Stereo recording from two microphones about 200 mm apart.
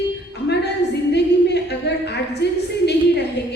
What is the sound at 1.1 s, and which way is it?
A woman's voice, 55° left (ahead or behind).